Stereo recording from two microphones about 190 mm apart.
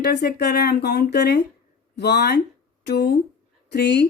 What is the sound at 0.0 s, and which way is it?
Speech, 60° left (ahead or behind).